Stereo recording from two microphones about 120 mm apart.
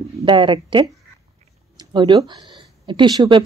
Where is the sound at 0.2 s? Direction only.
45° right (ahead or behind).